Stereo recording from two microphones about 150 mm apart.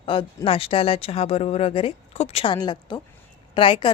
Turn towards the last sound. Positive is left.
turn(degrees=35)  # may be behind; listen again after turning